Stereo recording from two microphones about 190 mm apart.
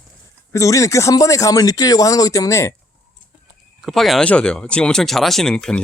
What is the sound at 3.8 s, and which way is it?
Speech, centre (ahead or behind).